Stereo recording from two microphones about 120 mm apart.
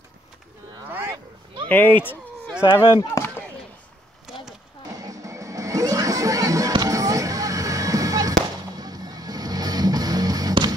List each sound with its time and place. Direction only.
0.8 s a sound: 15° right (ahead or behind)
1.7 s speech: 15° left (ahead or behind)
2.6 s speech: 45° left (ahead or behind)
5.0 s music: 25° right (ahead or behind)